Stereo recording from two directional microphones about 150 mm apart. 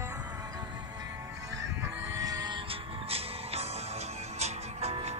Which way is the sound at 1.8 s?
20° right (ahead or behind).